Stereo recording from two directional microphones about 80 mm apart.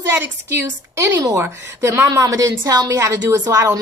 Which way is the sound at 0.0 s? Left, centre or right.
Right.